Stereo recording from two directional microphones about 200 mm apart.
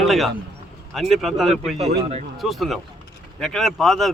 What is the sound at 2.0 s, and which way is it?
Speech, 30° right (ahead or behind).